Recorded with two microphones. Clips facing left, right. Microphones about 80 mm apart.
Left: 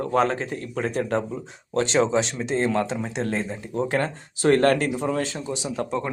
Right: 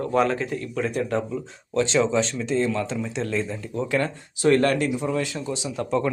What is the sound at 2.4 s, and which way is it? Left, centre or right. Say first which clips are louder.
Speech: left 1 dB; left.